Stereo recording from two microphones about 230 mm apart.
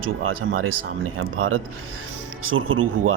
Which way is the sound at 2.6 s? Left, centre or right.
Right.